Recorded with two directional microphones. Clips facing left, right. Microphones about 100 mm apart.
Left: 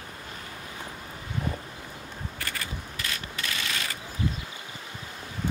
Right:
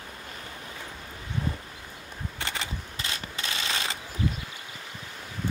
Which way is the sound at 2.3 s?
25° right (ahead or behind).